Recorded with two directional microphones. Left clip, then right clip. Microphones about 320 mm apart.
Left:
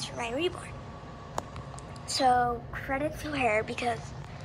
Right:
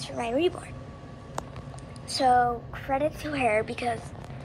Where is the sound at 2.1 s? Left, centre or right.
Centre.